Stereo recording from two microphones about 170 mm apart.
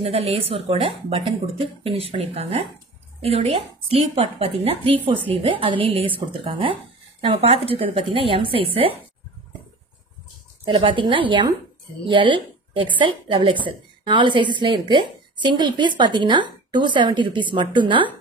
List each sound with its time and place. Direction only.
0.0 s speech: 35° right (ahead or behind)
10.6 s a woman's voice: 30° right (ahead or behind)